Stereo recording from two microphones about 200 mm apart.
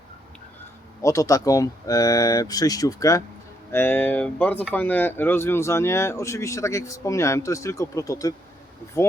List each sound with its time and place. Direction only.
1.0 s speech: 15° left (ahead or behind)